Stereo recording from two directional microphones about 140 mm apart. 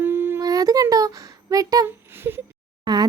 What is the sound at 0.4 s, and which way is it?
A child's voice, 25° right (ahead or behind).